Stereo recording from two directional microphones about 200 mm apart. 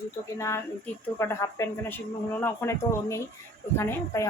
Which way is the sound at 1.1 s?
15° left (ahead or behind).